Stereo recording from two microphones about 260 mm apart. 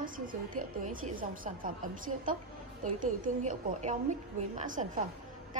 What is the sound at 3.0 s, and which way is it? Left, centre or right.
A woman's voice, right.